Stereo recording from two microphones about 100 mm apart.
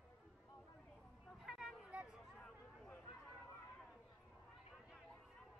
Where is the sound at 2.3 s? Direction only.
10° left (ahead or behind).